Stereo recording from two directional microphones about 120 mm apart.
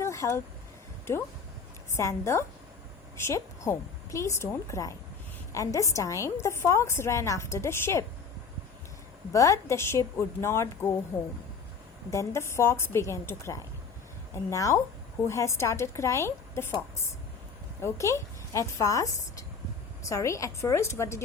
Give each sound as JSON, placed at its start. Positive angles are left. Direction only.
{"t": 0.0, "sound": "a sound", "side_deg": 25}
{"t": 2.0, "sound": "a woman's voice", "side_deg": 25}
{"t": 9.3, "sound": "a woman's voice", "side_deg": 25}
{"t": 12.1, "sound": "a woman's voice", "side_deg": 25}
{"t": 17.7, "sound": "a woman's voice", "side_deg": 25}